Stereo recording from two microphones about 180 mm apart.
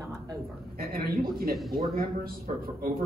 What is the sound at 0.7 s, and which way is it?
Speech, 55° right (ahead or behind).